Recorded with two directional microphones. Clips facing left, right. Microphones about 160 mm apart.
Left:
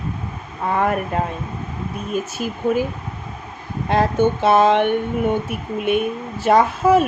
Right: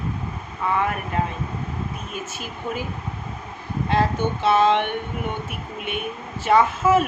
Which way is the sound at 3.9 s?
50° left (ahead or behind).